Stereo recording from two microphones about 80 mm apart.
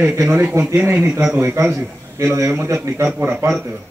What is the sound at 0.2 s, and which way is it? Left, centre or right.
A man's voice, right.